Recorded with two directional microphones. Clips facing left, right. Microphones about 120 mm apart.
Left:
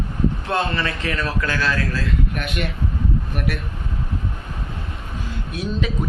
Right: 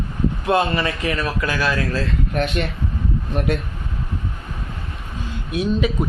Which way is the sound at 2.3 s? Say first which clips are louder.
Right 5 dB; 35° right (ahead or behind).